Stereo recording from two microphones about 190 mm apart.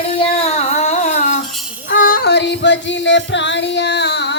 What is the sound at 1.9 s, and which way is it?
Music, 45° left (ahead or behind).